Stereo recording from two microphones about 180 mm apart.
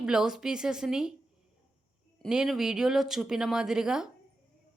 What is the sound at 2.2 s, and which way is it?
A woman's voice, centre (ahead or behind).